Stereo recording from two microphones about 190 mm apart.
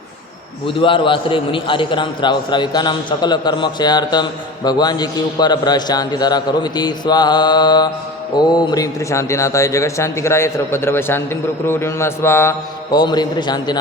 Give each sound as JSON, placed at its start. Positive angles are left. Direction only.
{"t": 0.8, "sound": "a man's voice", "side_deg": 25}